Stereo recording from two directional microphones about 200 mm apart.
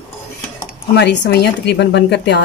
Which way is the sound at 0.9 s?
60° left (ahead or behind).